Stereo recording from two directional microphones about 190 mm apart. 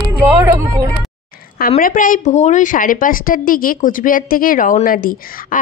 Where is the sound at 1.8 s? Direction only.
45° left (ahead or behind).